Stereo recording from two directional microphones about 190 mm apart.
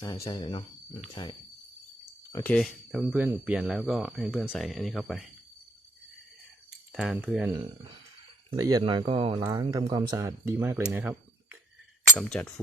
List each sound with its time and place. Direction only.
0.0 s speech: 20° left (ahead or behind)
2.3 s speech: 10° left (ahead or behind)
6.9 s speech: centre (ahead or behind)
8.4 s speech: 20° right (ahead or behind)
12.3 s speech: 5° left (ahead or behind)